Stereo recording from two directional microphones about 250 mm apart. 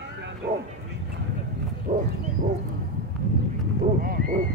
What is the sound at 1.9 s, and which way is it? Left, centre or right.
Wild animals, right.